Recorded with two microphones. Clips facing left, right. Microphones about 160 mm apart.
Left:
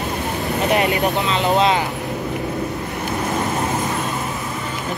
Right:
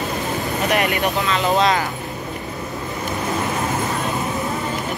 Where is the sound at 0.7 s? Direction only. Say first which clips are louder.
Left 1 dB; 20° left (ahead or behind).